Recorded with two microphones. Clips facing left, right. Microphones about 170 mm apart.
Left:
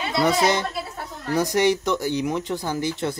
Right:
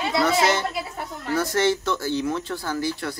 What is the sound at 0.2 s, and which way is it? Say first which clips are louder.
Speech: left 2 dB; 15° left (ahead or behind).